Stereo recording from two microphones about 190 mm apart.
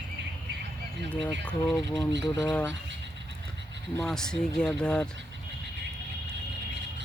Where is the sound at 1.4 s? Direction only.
Centre (ahead or behind).